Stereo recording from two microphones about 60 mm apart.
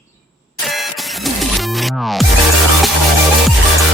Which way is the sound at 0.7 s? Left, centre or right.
Centre.